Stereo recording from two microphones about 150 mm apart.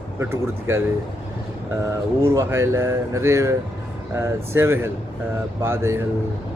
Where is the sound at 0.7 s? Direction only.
15° right (ahead or behind).